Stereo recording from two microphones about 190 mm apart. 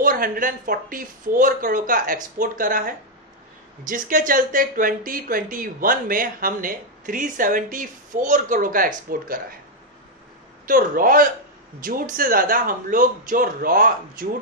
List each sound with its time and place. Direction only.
0.0 s speech: 50° right (ahead or behind)
10.7 s speech: 50° right (ahead or behind)